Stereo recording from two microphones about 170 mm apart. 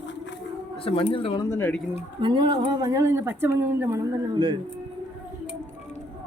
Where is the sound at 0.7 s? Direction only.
35° left (ahead or behind).